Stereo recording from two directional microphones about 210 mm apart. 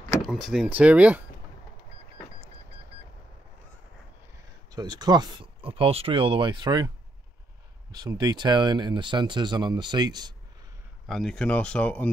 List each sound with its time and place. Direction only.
0.2 s speech: centre (ahead or behind)
4.6 s speech: 20° right (ahead or behind)
7.9 s speech: 20° right (ahead or behind)
11.1 s speech: centre (ahead or behind)